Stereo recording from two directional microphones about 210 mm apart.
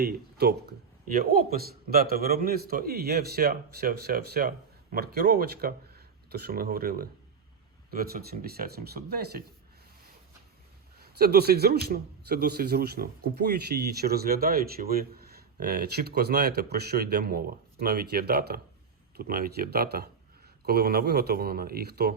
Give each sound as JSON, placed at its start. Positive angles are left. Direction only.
{"t": 0.0, "sound": "a man's voice", "side_deg": -45}
{"t": 11.0, "sound": "a man's voice", "side_deg": -50}